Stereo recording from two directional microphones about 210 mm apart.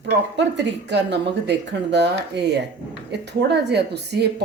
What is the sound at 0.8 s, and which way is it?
A woman's voice, 55° right (ahead or behind).